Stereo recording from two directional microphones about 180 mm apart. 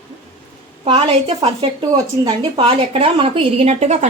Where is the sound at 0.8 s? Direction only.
30° right (ahead or behind).